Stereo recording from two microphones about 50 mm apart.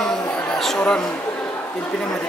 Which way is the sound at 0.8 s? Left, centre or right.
Centre.